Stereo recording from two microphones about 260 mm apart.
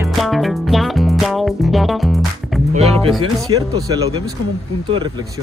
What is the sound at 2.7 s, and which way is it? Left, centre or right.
Speech, right.